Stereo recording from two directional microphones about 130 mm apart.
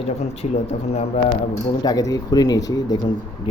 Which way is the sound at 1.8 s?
30° left (ahead or behind).